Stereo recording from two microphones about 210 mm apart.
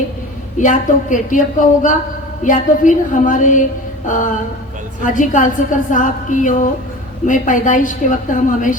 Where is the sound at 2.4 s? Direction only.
40° left (ahead or behind).